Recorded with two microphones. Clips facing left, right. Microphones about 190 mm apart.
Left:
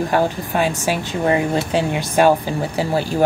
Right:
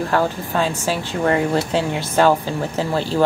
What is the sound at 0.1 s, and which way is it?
Speech, 15° left (ahead or behind).